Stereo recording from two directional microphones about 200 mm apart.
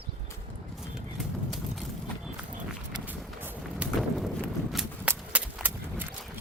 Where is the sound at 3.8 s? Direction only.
Centre (ahead or behind).